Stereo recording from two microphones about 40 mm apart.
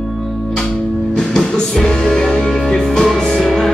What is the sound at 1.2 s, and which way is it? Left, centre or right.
Music, centre.